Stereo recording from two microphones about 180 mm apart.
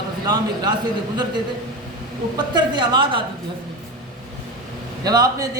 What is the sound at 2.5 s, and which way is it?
Speech, 25° right (ahead or behind).